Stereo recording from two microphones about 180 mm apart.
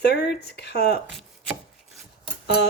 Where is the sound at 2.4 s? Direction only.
65° left (ahead or behind).